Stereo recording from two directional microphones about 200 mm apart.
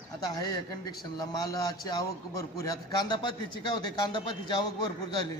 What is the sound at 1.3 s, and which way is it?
A man's voice, 20° left (ahead or behind).